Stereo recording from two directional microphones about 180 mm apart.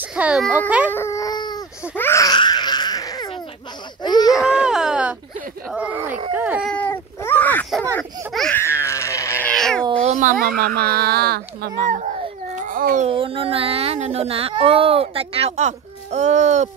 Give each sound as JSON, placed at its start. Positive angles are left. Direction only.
{"t": 0.0, "sound": "a child's voice", "side_deg": -5}
{"t": 0.9, "sound": "baby cry", "side_deg": 15}
{"t": 4.3, "sound": "baby cry", "side_deg": -5}
{"t": 5.7, "sound": "a child's voice", "side_deg": -5}
{"t": 6.3, "sound": "baby cry", "side_deg": -5}
{"t": 6.7, "sound": "a sound", "side_deg": 10}
{"t": 8.3, "sound": "baby cry", "side_deg": 0}
{"t": 8.8, "sound": "a sound", "side_deg": 15}
{"t": 9.5, "sound": "cat", "side_deg": 5}
{"t": 9.9, "sound": "a sound", "side_deg": -45}
{"t": 10.5, "sound": "speech", "side_deg": -60}
{"t": 12.5, "sound": "a sound", "side_deg": -50}
{"t": 13.1, "sound": "a child's voice", "side_deg": -30}